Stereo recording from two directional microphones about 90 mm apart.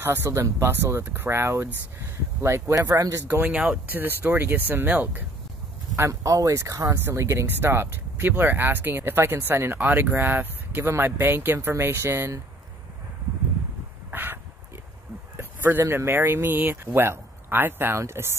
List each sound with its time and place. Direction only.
0.0 s speech: 25° right (ahead or behind)
2.8 s speech: 35° right (ahead or behind)
3.3 s speech: 25° right (ahead or behind)
3.5 s speech: 15° right (ahead or behind)
5.9 s speech: 35° right (ahead or behind)
14.1 s a sound: 25° right (ahead or behind)
15.9 s speech: 25° right (ahead or behind)